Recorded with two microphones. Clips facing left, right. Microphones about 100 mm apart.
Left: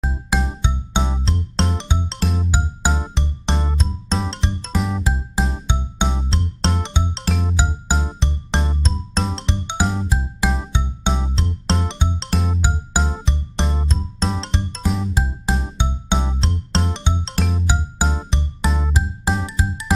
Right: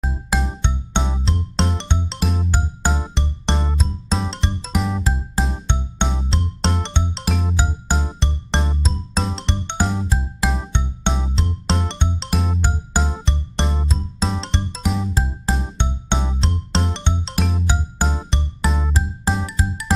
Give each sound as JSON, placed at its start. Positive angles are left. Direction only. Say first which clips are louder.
{"t": 0.0, "sound": "music", "louder": "left 1 dB", "side_deg": 0}
{"t": 15.1, "sound": "music", "louder": "even", "side_deg": 15}
{"t": 15.5, "sound": "music", "louder": "left 2 dB", "side_deg": 5}
{"t": 19.4, "sound": "music", "louder": "even", "side_deg": 20}